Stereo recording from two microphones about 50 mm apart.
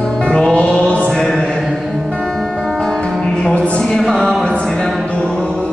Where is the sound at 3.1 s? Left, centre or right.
Centre.